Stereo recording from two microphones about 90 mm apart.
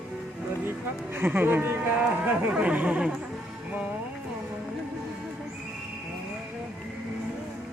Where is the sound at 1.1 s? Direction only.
25° right (ahead or behind).